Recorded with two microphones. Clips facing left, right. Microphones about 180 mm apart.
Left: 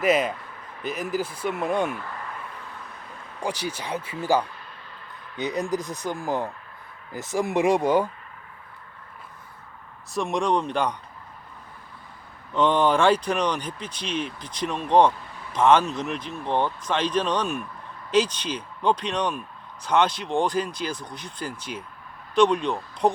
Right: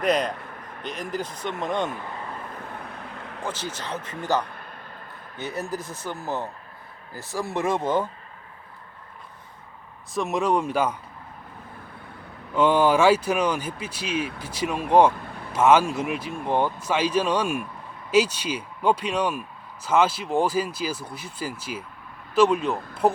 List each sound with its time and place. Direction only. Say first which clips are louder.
0.0 s speech: left 1 dB; 5° left (ahead or behind)
2.3 s vehicle: right 3 dB; 45° right (ahead or behind); by 3.4 s 70° right (ahead or behind)
3.4 s speech: left 3 dB; 15° left (ahead or behind)
4.5 s a sound: right 3 dB; 50° right (ahead or behind)
5.4 s speech: left 4 dB; 15° left (ahead or behind)
10.1 s speech: right 1 dB; centre (ahead or behind)
12.5 s speech: right 1 dB; 5° right (ahead or behind)